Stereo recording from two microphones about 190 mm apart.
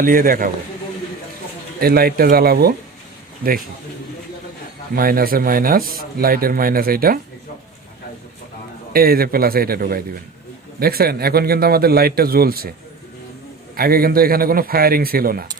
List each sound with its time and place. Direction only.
0.0 s speech: 45° right (ahead or behind)
1.8 s speech: 55° right (ahead or behind)
4.9 s speech: 50° right (ahead or behind)
8.9 s speech: 50° right (ahead or behind)
13.7 s speech: 50° right (ahead or behind)